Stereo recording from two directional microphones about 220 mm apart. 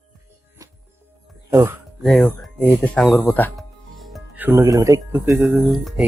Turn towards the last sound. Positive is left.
turn(degrees=-5)  # may be behind; listen again after turning